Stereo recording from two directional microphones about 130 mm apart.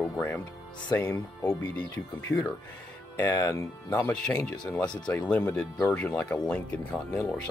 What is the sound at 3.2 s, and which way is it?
Speech, 25° left (ahead or behind).